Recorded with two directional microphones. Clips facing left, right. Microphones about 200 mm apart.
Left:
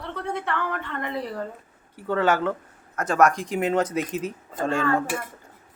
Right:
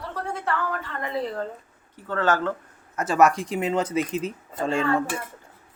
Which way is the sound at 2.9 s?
5° right (ahead or behind).